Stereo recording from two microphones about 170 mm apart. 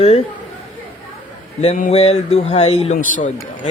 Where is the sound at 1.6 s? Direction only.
40° left (ahead or behind).